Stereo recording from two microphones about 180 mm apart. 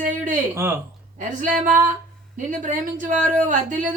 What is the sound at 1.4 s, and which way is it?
Speech, 45° right (ahead or behind).